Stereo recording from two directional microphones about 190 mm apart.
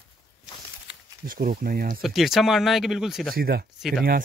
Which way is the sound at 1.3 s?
50° right (ahead or behind).